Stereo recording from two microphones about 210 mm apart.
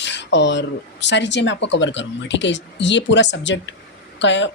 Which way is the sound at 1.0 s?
55° left (ahead or behind).